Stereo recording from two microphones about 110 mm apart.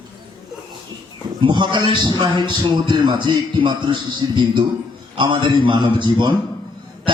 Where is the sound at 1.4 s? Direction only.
45° right (ahead or behind).